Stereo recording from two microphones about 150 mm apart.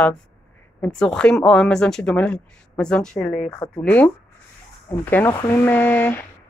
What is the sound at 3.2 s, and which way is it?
Speech, 50° left (ahead or behind).